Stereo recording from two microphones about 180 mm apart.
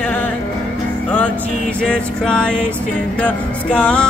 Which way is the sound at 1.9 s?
5° left (ahead or behind).